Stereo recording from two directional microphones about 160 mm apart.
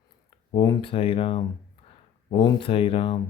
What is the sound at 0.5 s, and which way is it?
Speech, 25° left (ahead or behind).